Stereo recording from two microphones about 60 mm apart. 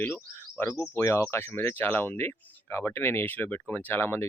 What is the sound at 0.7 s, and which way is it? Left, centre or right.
Speech, left.